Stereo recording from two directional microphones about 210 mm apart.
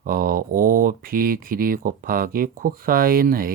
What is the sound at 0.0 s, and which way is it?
Speech, 45° right (ahead or behind).